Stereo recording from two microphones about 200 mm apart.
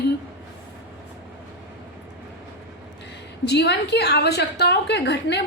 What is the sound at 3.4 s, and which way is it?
A woman's voice, 55° left (ahead or behind).